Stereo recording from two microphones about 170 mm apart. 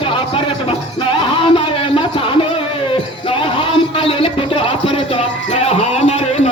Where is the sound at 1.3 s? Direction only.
30° left (ahead or behind).